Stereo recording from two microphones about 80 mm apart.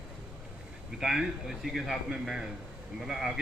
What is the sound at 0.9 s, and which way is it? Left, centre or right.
A man's voice, centre.